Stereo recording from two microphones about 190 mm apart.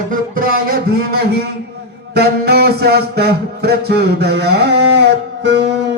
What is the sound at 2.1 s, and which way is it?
Music, 55° right (ahead or behind).